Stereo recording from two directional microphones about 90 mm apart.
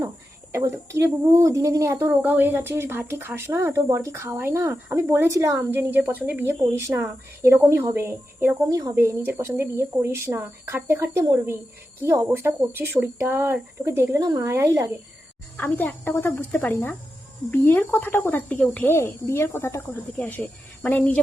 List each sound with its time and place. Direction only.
0.5 s speech: 30° right (ahead or behind)
2.2 s speech: 20° right (ahead or behind)
8.6 s speech: 40° right (ahead or behind)
15.5 s speech: 25° left (ahead or behind)
18.9 s speech: 25° left (ahead or behind)